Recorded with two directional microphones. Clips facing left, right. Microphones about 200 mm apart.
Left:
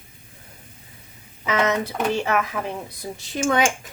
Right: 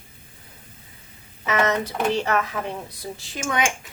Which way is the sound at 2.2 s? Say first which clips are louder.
Left 1 dB; 10° left (ahead or behind).